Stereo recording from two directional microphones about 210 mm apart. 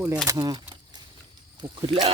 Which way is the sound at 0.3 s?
15° right (ahead or behind).